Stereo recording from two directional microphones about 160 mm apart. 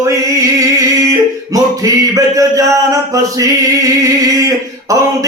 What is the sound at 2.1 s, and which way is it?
Speech, 20° right (ahead or behind).